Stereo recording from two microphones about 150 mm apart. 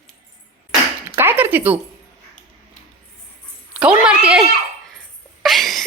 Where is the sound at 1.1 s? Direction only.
15° right (ahead or behind).